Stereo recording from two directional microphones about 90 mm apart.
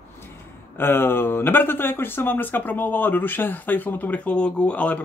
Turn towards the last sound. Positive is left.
turn(degrees=15)  # may be behind; listen again after turning